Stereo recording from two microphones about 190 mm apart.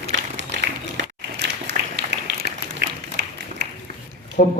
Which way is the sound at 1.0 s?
65° right (ahead or behind).